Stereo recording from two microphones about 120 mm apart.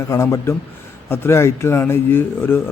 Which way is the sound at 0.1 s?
25° left (ahead or behind).